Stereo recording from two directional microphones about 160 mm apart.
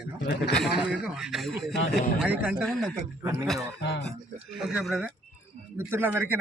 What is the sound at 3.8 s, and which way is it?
Speech, 90° left.